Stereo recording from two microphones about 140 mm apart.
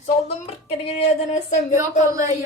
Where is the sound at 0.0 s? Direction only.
55° left (ahead or behind).